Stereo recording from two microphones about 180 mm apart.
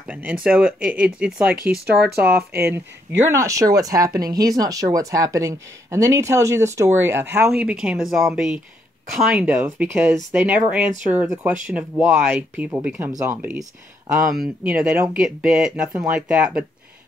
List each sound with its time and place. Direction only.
0.0 s speech: 10° right (ahead or behind)
1.6 s speech: 60° right (ahead or behind)
3.3 s speech: 15° right (ahead or behind)